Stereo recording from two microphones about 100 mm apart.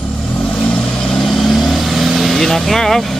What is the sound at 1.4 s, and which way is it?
Vehicle, centre (ahead or behind).